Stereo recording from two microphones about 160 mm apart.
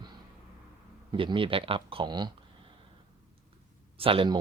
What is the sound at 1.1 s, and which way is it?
Speech, 30° right (ahead or behind).